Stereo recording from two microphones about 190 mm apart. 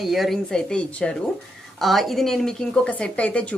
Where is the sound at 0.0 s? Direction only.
Centre (ahead or behind).